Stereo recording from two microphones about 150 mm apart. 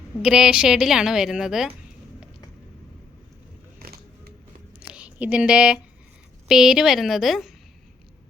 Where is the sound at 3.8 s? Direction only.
90° right.